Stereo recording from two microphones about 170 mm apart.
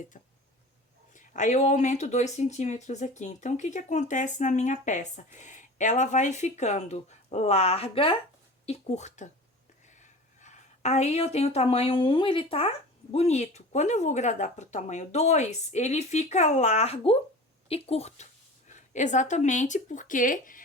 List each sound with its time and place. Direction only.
0.1 s a woman's voice: 50° left (ahead or behind)